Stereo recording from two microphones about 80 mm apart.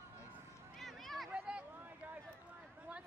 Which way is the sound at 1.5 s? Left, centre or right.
Centre.